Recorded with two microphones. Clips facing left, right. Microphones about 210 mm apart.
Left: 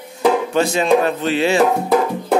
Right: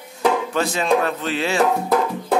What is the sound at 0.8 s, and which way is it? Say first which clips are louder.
Speech: left 4 dB; 25° left (ahead or behind).